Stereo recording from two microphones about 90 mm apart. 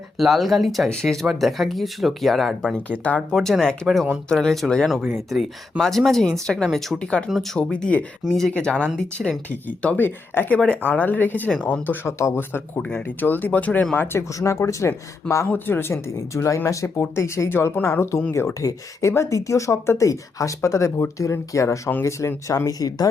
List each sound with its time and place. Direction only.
0.2 s speech: centre (ahead or behind)
8.2 s speech: centre (ahead or behind)
8.5 s speech: 10° left (ahead or behind); by 23.0 s 40° left (ahead or behind)